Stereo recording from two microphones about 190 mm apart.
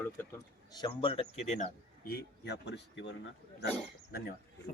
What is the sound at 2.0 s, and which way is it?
Speech, 60° left (ahead or behind).